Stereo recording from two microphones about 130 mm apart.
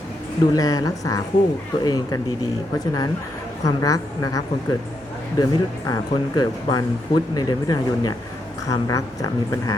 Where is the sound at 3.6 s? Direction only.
25° left (ahead or behind).